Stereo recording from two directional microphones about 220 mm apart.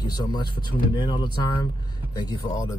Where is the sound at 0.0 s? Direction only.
20° left (ahead or behind).